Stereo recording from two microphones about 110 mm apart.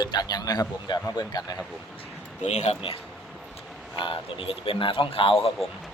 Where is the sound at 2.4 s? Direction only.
85° left.